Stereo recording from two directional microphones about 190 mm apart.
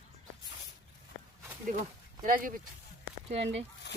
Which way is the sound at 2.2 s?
45° right (ahead or behind).